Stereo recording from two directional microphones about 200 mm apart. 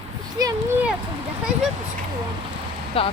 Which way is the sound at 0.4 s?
20° right (ahead or behind).